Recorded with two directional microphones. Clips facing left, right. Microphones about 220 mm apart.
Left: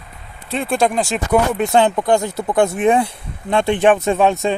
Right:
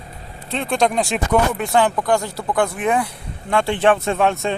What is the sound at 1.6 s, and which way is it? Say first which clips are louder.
Speech: left 3 dB; 25° left (ahead or behind).